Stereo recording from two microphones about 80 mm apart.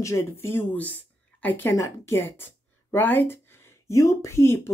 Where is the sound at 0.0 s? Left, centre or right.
Left.